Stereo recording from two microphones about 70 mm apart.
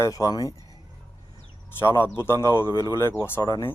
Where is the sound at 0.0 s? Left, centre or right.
Left.